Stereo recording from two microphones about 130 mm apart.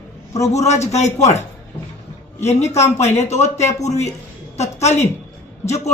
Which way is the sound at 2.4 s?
60° left (ahead or behind).